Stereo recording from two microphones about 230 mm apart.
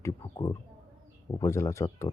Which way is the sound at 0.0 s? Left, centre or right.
Centre.